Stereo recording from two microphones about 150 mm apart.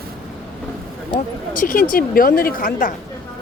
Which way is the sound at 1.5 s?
70° left (ahead or behind).